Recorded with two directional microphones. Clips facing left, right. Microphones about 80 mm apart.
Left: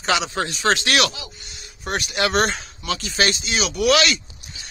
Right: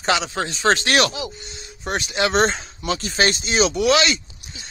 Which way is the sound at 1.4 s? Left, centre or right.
Right.